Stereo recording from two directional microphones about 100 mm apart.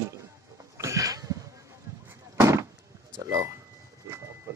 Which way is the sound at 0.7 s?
35° right (ahead or behind).